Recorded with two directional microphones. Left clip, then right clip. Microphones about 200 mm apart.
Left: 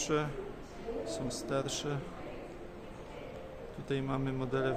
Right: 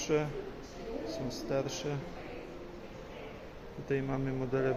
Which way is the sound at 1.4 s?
5° left (ahead or behind).